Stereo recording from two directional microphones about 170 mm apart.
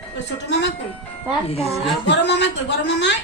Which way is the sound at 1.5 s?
35° left (ahead or behind).